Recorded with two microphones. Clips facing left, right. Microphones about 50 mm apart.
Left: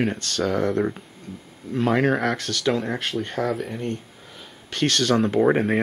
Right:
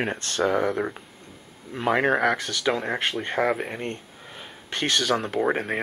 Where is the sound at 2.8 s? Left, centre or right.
Centre.